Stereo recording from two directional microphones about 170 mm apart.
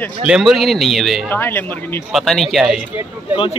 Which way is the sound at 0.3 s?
Centre (ahead or behind).